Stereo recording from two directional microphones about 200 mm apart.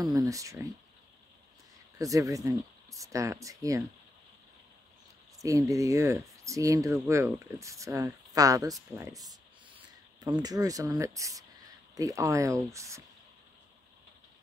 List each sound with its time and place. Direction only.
0.0 s speech: 15° right (ahead or behind)
2.0 s speech: 15° right (ahead or behind)
5.4 s speech: 15° right (ahead or behind)
10.2 s speech: 20° right (ahead or behind)